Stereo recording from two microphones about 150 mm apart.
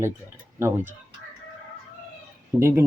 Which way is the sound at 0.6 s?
15° right (ahead or behind).